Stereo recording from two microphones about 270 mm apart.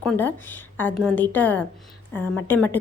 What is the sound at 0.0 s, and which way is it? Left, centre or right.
A woman's voice, centre.